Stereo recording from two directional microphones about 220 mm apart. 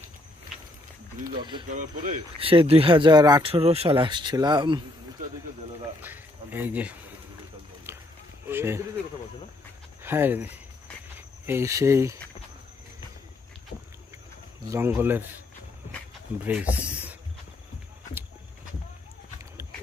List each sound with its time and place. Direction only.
1.2 s speech: 20° right (ahead or behind)
6.0 s speech: 10° right (ahead or behind)
8.5 s speech: 10° right (ahead or behind)
10.0 s speech: 10° right (ahead or behind)
14.7 s speech: 10° right (ahead or behind)
16.4 s speech: 5° right (ahead or behind)